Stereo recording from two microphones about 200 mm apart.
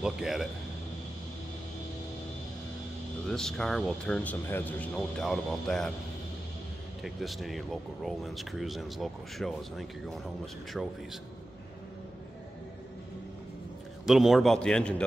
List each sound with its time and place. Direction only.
0.0 s speech: centre (ahead or behind)
3.3 s speech: 5° left (ahead or behind)
7.0 s speech: centre (ahead or behind)
14.0 s speech: centre (ahead or behind)